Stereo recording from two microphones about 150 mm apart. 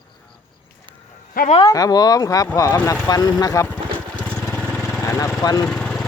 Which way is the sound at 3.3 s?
25° left (ahead or behind).